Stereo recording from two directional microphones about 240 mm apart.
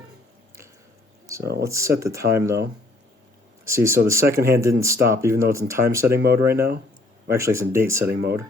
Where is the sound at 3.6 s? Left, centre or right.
Centre.